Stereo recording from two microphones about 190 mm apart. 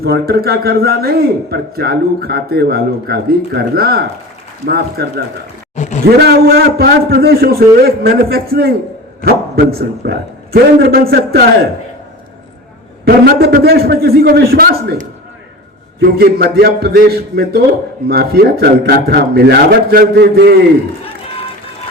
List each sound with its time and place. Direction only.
0.0 s a man's voice: 55° right (ahead or behind)
5.7 s a sound: 40° left (ahead or behind)
6.1 s a man's voice: 55° right (ahead or behind)
13.1 s a man's voice: 55° right (ahead or behind)